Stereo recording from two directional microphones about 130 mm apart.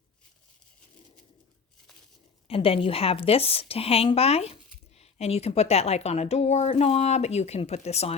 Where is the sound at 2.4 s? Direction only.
45° left (ahead or behind).